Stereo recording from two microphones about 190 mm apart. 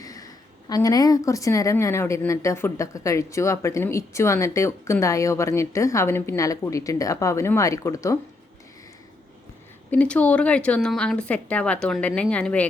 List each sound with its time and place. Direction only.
0.0 s speech: 20° left (ahead or behind)
9.9 s speech: 5° left (ahead or behind)